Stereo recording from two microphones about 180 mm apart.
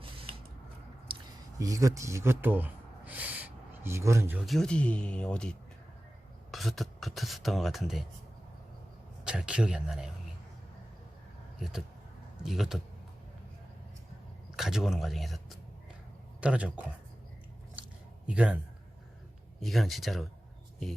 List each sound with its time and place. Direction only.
1.1 s a sound: 30° right (ahead or behind)
1.5 s speech: 20° right (ahead or behind)
4.4 s speech: centre (ahead or behind)
9.2 s speech: 5° right (ahead or behind)
12.4 s speech: centre (ahead or behind)
14.5 s speech: centre (ahead or behind)
18.3 s speech: 5° right (ahead or behind)
19.6 s speech: centre (ahead or behind)